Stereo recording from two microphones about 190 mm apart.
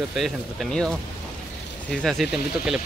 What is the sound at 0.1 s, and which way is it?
Speech, centre (ahead or behind).